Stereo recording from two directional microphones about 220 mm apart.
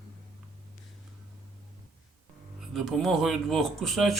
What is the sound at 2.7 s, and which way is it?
Speech, centre (ahead or behind).